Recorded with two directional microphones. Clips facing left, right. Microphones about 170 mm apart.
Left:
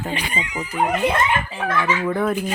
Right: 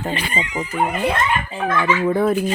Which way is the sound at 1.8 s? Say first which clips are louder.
Right 4 dB; 30° right (ahead or behind).